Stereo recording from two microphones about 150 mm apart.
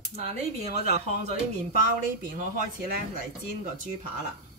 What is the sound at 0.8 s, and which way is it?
Speech, 45° right (ahead or behind).